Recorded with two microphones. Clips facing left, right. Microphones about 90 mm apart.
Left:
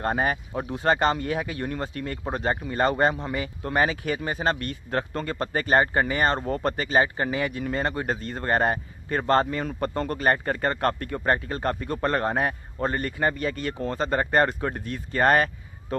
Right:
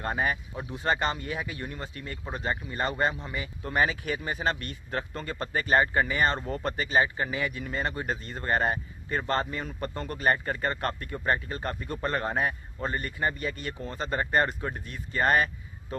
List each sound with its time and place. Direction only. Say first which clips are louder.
0.0 s speech: left 4 dB; 50° left (ahead or behind)